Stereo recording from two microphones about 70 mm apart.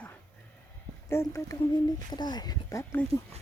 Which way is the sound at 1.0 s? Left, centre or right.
Left.